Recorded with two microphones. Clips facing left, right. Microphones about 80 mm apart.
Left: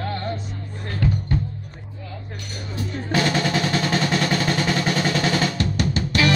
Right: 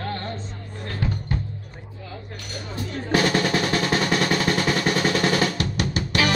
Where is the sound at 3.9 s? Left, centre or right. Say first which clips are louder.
Even; centre.